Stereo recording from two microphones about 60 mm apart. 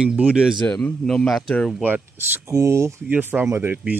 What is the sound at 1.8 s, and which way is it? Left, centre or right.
Speech, right.